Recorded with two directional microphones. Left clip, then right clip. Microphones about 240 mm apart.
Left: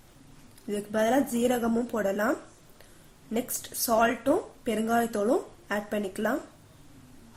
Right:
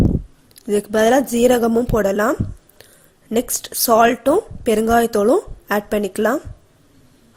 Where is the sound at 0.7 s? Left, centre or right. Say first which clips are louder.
Right 11 dB; right.